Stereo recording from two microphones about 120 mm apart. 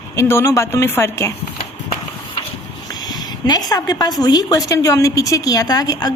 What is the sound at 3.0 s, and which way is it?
A woman's voice, 35° left (ahead or behind).